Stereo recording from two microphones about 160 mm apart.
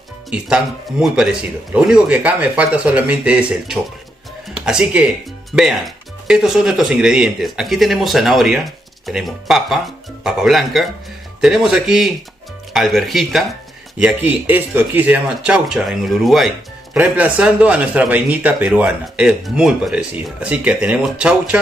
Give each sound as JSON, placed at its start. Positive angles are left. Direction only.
{"t": 0.3, "sound": "speech", "side_deg": -5}